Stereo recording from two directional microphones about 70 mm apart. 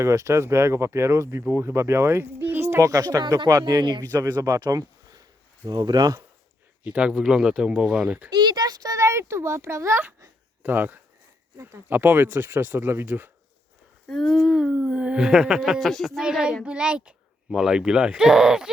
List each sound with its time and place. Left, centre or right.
0.0 s speech: right
4.1 s speech: right
4.4 s speech: right
5.6 s speech: right
6.8 s speech: centre
8.3 s a child's voice: right
9.0 s speech: right
10.6 s speech: right
14.1 s speech: centre
15.2 s speech: centre
15.8 s speech: centre
16.2 s speech: centre